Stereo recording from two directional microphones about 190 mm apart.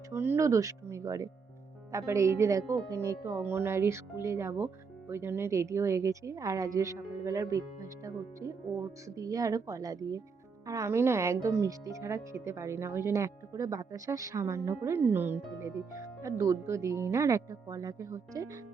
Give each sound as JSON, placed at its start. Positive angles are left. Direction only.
{"t": 0.1, "sound": "a woman's voice", "side_deg": -10}